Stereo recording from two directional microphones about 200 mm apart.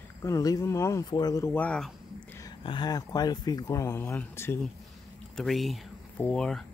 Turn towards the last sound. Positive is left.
turn(degrees=5)  # may be behind; listen again after turning